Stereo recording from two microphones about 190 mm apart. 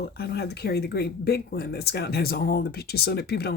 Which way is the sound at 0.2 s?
60° left (ahead or behind).